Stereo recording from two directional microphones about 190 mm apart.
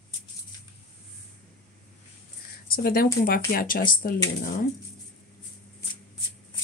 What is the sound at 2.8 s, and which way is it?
Speech, 50° left (ahead or behind).